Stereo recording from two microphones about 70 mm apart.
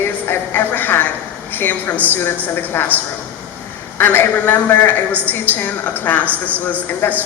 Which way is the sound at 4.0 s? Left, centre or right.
Left.